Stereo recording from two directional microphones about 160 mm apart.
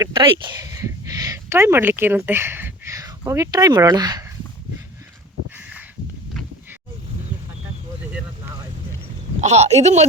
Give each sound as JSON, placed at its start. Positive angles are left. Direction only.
{"t": 0.1, "sound": "speech", "side_deg": -30}
{"t": 9.4, "sound": "speech", "side_deg": -45}